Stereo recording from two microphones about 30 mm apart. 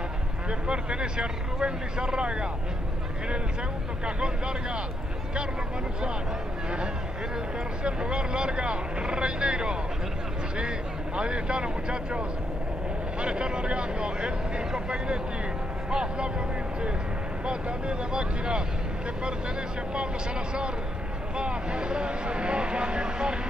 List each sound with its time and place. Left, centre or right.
0.5 s speech: right
4.0 s speech: right
7.8 s speech: right
11.1 s speech: right
21.4 s speech: right